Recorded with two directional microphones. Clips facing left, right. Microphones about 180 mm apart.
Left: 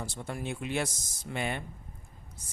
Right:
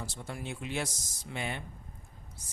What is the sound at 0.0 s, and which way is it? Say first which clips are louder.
Speech: left 3 dB; 55° left (ahead or behind).